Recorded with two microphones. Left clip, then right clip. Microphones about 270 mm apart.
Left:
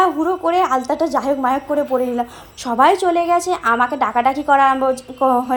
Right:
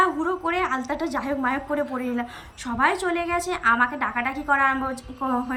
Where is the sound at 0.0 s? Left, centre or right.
Centre.